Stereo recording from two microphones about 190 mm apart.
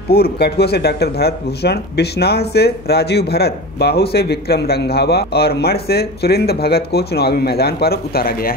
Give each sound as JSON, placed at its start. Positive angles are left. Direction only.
{"t": 0.1, "sound": "speech", "side_deg": 55}